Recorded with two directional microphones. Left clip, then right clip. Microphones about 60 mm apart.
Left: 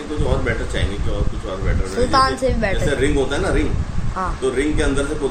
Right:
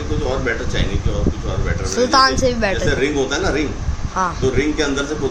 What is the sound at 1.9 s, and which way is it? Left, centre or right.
Speech, right.